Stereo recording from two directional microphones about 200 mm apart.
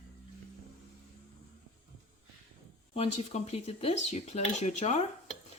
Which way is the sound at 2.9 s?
30° left (ahead or behind).